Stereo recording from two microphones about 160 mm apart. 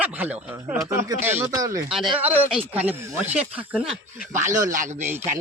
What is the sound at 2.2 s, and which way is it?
Speech, 10° right (ahead or behind).